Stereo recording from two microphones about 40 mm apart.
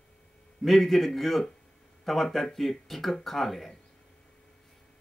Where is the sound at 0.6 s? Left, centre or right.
Centre.